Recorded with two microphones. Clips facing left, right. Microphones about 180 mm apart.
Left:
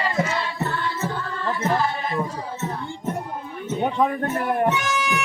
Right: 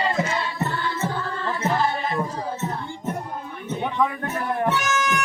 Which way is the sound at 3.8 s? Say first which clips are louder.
Left 3 dB; 35° left (ahead or behind).